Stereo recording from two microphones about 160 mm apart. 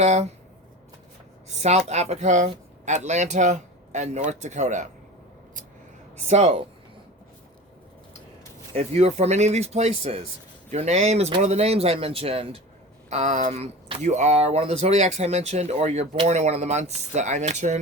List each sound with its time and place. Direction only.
0.0 s speech: 45° right (ahead or behind)
1.5 s speech: 45° right (ahead or behind)
6.2 s speech: 40° right (ahead or behind)
8.7 s speech: 45° right (ahead or behind)